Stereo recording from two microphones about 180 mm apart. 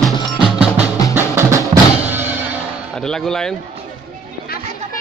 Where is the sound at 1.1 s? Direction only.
15° right (ahead or behind).